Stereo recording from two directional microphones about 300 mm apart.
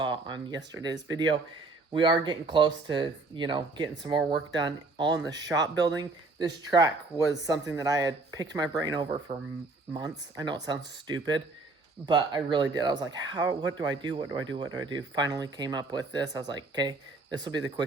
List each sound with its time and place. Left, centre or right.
0.0 s speech: centre
5.1 s speech: right
5.5 s speech: centre
9.3 s speech: right
9.9 s speech: centre